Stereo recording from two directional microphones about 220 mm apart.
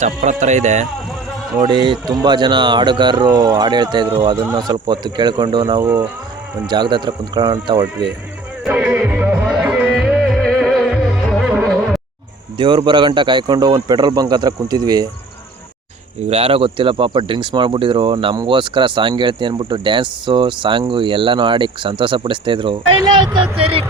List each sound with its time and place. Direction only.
0.0 s speech: 35° right (ahead or behind)
1.6 s speech: 20° right (ahead or behind)
8.6 s music: 5° right (ahead or behind)
12.5 s speech: 20° right (ahead or behind)
16.3 s speech: 25° right (ahead or behind)